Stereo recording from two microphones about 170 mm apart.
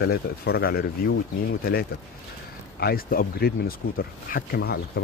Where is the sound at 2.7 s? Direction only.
65° left (ahead or behind).